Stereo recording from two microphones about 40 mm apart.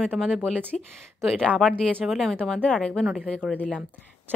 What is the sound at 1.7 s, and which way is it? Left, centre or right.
Speech, left.